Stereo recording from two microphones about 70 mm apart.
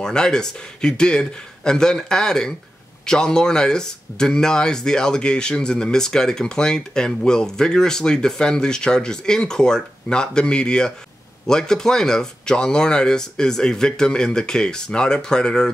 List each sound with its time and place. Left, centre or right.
0.0 s speech: centre